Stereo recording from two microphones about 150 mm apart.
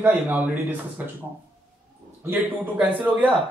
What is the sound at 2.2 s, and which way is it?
Speech, 10° right (ahead or behind).